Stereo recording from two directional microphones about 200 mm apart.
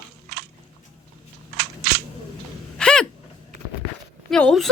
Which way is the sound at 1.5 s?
55° right (ahead or behind).